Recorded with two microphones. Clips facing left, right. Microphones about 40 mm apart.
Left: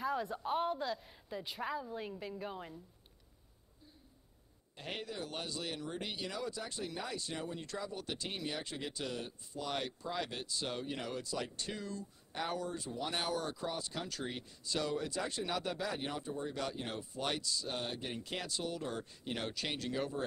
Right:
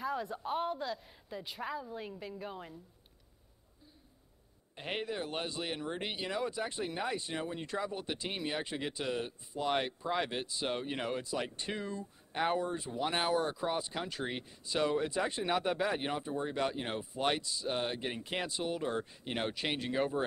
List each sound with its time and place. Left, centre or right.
0.0 s a woman's voice: centre
4.7 s speech: right